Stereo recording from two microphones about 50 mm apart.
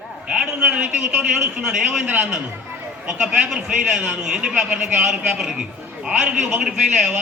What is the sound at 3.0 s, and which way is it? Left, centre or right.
A man's voice, right.